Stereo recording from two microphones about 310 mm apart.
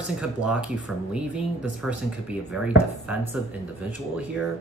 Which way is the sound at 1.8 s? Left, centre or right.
Centre.